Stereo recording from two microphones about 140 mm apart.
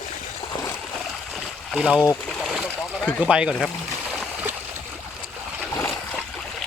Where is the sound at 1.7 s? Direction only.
10° right (ahead or behind).